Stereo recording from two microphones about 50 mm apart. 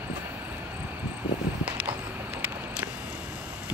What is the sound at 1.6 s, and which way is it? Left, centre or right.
Run, right.